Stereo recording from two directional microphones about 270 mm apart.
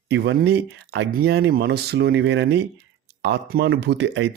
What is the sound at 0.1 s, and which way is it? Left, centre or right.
Speech, right.